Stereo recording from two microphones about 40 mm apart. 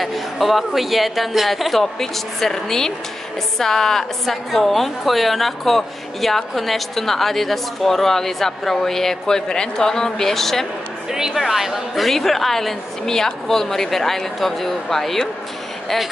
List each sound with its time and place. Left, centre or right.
0.0 s a woman's voice: centre
11.1 s a sound: centre
11.3 s a woman's voice: centre